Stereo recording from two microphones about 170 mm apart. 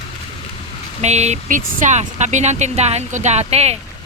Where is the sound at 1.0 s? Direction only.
40° right (ahead or behind).